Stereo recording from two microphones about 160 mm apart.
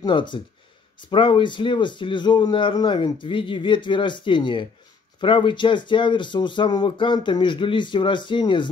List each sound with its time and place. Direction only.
0.0 s a man's voice: 30° left (ahead or behind)